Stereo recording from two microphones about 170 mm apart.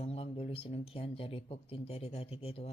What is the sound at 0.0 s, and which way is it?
Speech, 35° left (ahead or behind).